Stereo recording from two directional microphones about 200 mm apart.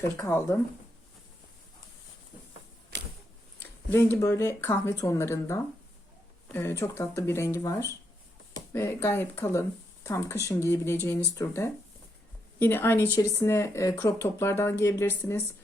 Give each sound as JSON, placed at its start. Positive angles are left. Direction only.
{"t": 0.0, "sound": "speech", "side_deg": 10}
{"t": 2.9, "sound": "a sound", "side_deg": -55}
{"t": 3.8, "sound": "speech", "side_deg": 10}